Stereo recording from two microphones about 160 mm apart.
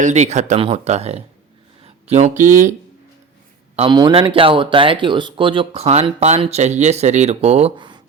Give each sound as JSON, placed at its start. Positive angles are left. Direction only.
{"t": 0.0, "sound": "speech", "side_deg": -45}
{"t": 3.8, "sound": "speech", "side_deg": -30}
{"t": 7.8, "sound": "a sound", "side_deg": -30}